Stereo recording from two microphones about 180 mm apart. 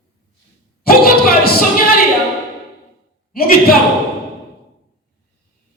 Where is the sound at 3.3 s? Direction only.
55° left (ahead or behind).